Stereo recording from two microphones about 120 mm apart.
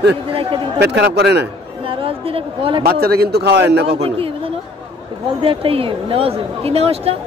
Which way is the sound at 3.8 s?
55° right (ahead or behind).